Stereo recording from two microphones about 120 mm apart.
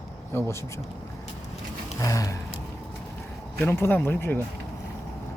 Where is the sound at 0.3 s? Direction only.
25° left (ahead or behind).